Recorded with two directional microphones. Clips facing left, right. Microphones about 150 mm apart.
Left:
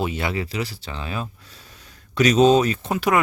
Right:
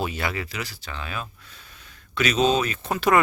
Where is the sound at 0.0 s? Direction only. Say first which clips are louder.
Left 3 dB; 25° left (ahead or behind).